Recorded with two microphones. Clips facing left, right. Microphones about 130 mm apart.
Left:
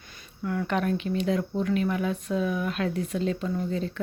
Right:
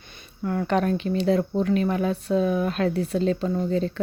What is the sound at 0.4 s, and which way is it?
Speech, 35° right (ahead or behind).